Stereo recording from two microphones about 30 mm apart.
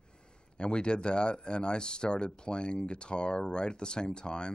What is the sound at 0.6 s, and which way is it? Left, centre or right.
Speech, left.